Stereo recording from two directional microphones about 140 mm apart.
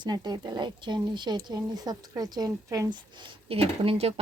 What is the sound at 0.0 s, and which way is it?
Speech, 30° right (ahead or behind).